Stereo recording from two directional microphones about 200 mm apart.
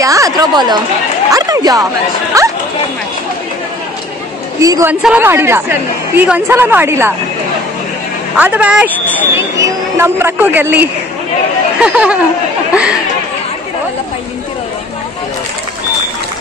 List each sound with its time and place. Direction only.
0.0 s a woman's voice: 15° right (ahead or behind)
4.6 s a woman's voice: 15° right (ahead or behind)
8.4 s a woman's voice: 5° right (ahead or behind)